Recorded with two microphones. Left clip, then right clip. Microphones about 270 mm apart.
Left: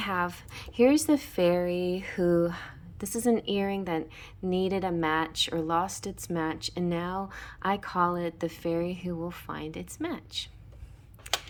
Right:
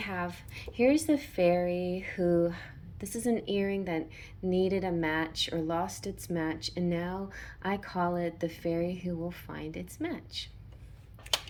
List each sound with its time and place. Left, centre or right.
0.0 s speech: centre
11.3 s tick-tock: centre